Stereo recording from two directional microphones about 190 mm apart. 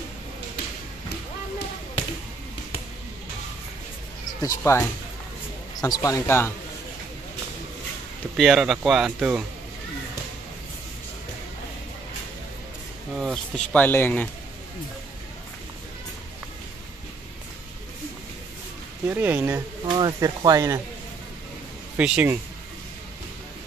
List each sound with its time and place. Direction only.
4.4 s speech: 15° left (ahead or behind)
8.4 s speech: centre (ahead or behind)
13.2 s speech: centre (ahead or behind)
19.0 s speech: 10° right (ahead or behind)
19.9 s speech: 20° right (ahead or behind)
21.9 s speech: 5° right (ahead or behind)